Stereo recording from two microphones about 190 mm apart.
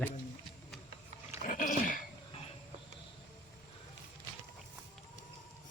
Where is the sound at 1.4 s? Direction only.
45° left (ahead or behind).